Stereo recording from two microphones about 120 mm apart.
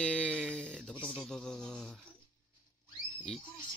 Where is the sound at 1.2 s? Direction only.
5° left (ahead or behind).